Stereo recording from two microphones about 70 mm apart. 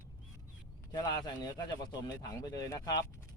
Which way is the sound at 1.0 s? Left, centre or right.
Left.